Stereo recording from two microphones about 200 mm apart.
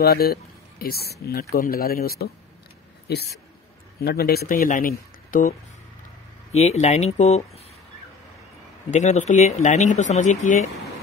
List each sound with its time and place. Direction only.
0.0 s speech: 50° left (ahead or behind)
6.5 s speech: 35° left (ahead or behind)
8.9 s speech: 35° left (ahead or behind)